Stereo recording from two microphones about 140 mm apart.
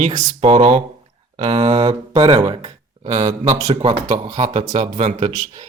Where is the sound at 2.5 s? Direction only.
35° right (ahead or behind).